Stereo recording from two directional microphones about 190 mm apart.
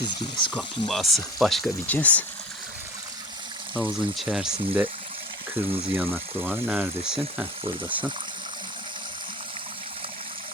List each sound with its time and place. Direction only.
0.0 s speech: 25° left (ahead or behind)
0.5 s speech: centre (ahead or behind)
3.8 s speech: centre (ahead or behind)